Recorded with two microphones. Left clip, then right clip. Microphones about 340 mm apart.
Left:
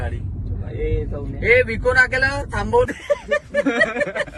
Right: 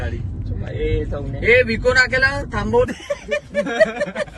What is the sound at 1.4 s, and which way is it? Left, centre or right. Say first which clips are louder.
Speech: right 1 dB; left.